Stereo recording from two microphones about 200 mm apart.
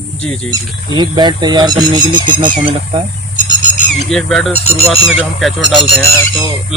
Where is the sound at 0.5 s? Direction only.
20° right (ahead or behind).